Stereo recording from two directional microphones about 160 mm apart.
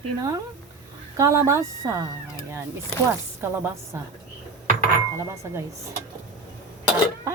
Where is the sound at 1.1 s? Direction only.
20° right (ahead or behind).